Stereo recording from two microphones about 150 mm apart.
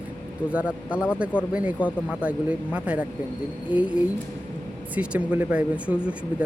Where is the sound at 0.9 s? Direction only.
15° left (ahead or behind).